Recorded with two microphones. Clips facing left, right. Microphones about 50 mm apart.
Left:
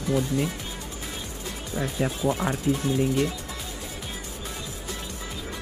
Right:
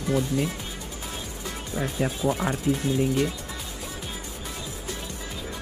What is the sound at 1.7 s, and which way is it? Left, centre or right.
Speech, centre.